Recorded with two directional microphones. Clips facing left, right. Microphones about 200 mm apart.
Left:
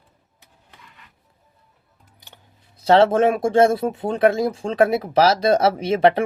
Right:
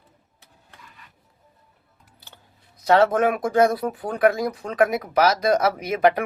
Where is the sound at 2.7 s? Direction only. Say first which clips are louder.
Left 3 dB; 30° left (ahead or behind).